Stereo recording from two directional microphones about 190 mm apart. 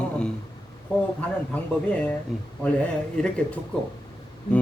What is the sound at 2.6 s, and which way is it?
A man's voice, 5° left (ahead or behind).